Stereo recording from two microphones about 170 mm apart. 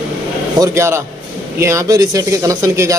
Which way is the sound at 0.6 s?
15° right (ahead or behind).